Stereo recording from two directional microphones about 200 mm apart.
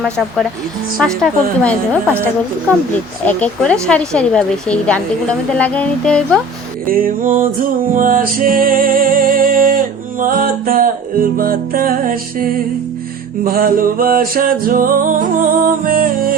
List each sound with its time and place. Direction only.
0.0 s speech: centre (ahead or behind)
3.2 s speech: 5° left (ahead or behind)
5.5 s music: 5° left (ahead or behind)
6.8 s music: 45° right (ahead or behind)